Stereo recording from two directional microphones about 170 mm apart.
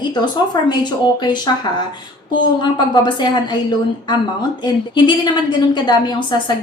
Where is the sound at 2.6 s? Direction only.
25° left (ahead or behind).